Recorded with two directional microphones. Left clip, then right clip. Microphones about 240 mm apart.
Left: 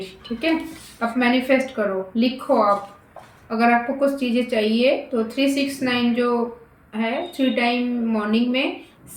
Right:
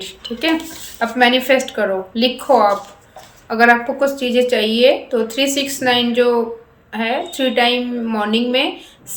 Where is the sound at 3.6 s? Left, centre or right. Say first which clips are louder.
Right 6 dB; centre.